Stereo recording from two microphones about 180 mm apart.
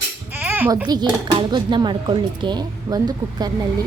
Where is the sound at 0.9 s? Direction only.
25° right (ahead or behind).